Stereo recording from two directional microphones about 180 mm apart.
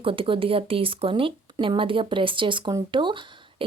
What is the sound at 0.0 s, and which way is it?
Speech, 30° right (ahead or behind).